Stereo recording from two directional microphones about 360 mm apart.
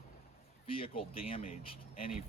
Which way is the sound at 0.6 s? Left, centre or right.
Centre.